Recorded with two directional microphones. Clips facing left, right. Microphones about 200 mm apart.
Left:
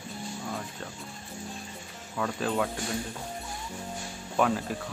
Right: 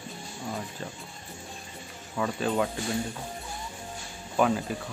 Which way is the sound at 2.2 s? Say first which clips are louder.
Right 2 dB; 5° right (ahead or behind).